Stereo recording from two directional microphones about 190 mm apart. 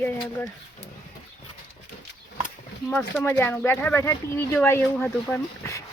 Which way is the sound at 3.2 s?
10° left (ahead or behind).